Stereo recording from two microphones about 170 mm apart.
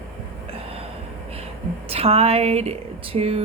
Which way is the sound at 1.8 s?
35° right (ahead or behind).